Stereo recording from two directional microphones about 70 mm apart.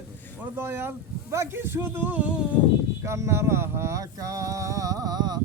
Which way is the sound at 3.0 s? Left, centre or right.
Right.